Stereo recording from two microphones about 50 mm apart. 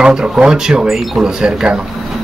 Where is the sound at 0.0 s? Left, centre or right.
Centre.